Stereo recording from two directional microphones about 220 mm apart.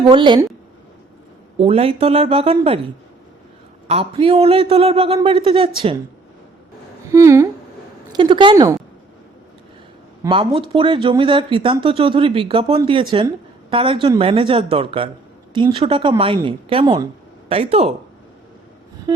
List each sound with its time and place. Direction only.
0.1 s speech: 20° right (ahead or behind)
1.5 s speech: 25° right (ahead or behind)
3.8 s speech: 25° right (ahead or behind)
7.1 s speech: 15° right (ahead or behind)
10.2 s speech: 25° right (ahead or behind)